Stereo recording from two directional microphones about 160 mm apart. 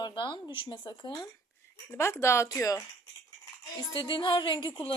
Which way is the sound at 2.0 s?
15° left (ahead or behind).